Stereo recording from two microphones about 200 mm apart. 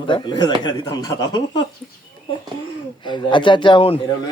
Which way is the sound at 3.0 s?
25° left (ahead or behind).